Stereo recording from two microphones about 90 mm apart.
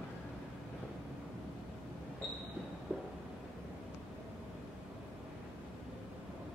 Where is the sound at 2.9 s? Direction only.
15° right (ahead or behind).